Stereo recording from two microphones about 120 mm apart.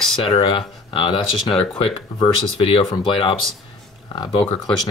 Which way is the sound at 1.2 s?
Centre (ahead or behind).